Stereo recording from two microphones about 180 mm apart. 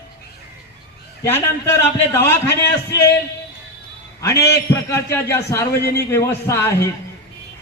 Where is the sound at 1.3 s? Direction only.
15° left (ahead or behind).